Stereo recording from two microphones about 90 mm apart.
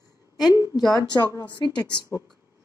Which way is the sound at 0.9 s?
45° left (ahead or behind).